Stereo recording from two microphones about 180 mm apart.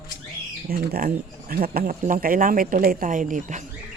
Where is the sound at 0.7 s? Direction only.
55° right (ahead or behind).